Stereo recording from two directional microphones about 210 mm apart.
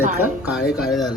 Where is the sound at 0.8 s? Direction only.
Centre (ahead or behind).